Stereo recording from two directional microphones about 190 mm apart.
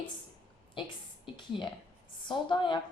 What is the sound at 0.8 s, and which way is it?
Speech, 25° left (ahead or behind).